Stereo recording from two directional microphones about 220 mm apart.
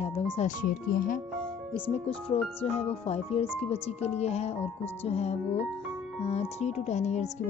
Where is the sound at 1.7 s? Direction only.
25° left (ahead or behind).